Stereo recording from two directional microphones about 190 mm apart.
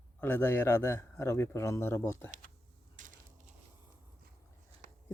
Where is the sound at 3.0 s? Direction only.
40° right (ahead or behind).